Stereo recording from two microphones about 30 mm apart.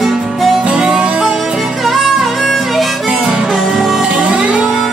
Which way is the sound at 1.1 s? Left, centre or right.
Right.